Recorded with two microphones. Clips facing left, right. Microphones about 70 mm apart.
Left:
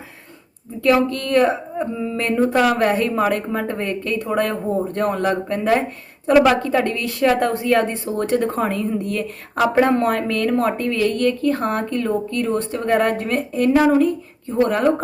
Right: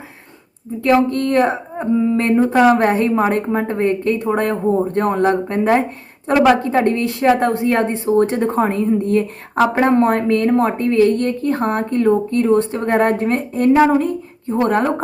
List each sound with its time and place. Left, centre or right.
0.8 s a woman's voice: right